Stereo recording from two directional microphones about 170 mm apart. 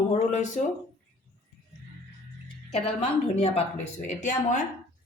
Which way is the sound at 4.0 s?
50° left (ahead or behind).